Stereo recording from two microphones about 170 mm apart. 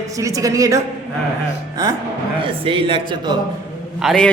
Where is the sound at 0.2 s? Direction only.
20° right (ahead or behind).